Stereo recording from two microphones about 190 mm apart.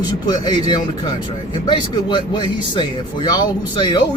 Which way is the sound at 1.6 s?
25° left (ahead or behind).